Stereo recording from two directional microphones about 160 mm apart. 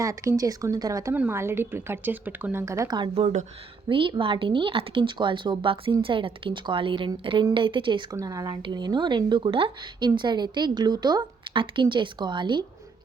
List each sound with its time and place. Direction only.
0.0 s speech: 20° right (ahead or behind)
8.1 s speech: 20° right (ahead or behind)